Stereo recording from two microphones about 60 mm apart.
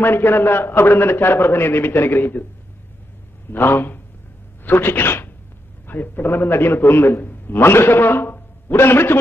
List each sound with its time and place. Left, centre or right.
0.0 s a man's voice: left
3.5 s a man's voice: left